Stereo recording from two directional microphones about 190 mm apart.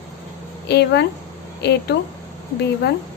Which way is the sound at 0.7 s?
60° left (ahead or behind).